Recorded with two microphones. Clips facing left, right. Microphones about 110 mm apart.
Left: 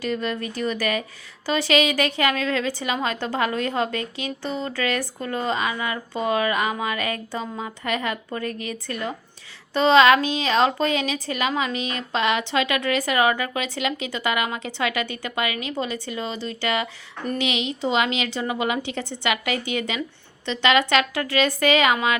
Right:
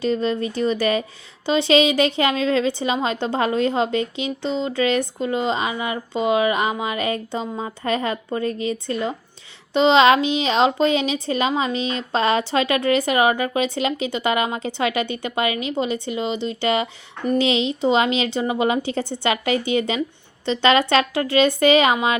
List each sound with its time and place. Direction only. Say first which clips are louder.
0.0 s a woman's voice: right 5 dB; 30° right (ahead or behind)